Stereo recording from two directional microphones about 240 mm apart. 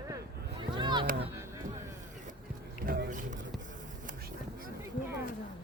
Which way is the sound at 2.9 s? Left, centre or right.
Right.